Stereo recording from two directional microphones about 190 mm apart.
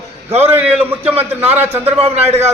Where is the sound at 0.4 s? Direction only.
10° right (ahead or behind).